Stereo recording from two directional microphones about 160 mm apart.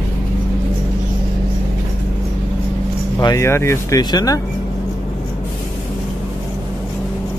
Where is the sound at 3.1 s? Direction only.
20° left (ahead or behind).